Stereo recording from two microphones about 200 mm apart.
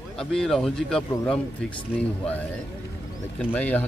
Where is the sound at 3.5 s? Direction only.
10° left (ahead or behind).